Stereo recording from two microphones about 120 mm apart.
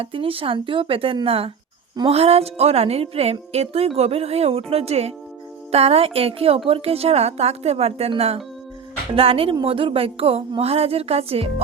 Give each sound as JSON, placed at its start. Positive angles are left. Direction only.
{"t": 0.0, "sound": "speech", "side_deg": -50}